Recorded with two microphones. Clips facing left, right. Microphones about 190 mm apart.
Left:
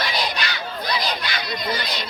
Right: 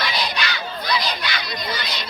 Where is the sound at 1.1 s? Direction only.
45° left (ahead or behind).